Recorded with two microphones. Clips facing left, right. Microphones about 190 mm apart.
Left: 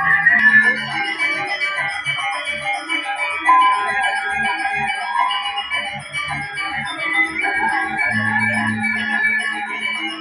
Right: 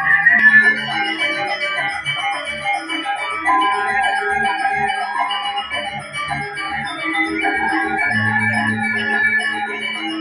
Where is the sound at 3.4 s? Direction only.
40° right (ahead or behind).